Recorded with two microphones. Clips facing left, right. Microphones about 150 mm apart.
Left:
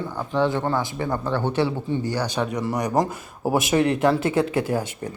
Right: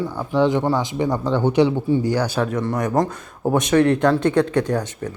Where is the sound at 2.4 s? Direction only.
Centre (ahead or behind).